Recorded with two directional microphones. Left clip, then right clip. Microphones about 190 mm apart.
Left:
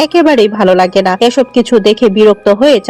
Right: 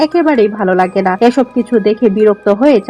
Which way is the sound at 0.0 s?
25° left (ahead or behind).